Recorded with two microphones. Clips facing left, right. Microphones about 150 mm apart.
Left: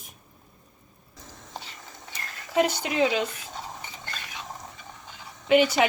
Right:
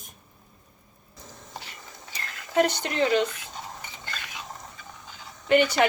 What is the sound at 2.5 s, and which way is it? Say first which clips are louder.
Speech: even; 5° left (ahead or behind).